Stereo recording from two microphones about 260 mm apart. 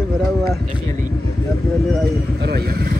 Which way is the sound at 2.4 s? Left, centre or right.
Right.